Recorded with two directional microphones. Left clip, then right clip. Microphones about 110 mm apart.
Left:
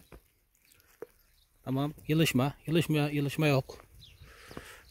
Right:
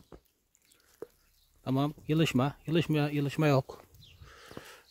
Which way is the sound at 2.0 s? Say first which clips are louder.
Left 3 dB; 5° left (ahead or behind).